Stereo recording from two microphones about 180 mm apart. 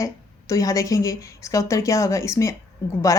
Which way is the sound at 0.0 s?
20° left (ahead or behind).